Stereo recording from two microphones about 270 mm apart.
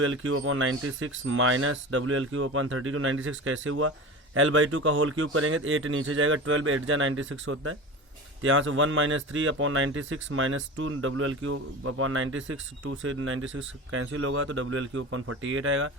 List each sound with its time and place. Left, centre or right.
0.0 s speech: right